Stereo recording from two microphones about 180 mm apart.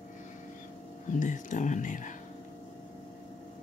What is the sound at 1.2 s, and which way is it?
Speech, 45° left (ahead or behind).